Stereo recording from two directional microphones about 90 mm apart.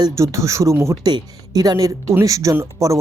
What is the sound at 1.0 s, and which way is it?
Speech, 50° right (ahead or behind).